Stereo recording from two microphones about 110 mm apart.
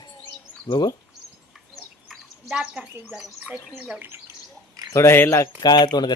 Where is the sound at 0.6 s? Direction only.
40° left (ahead or behind).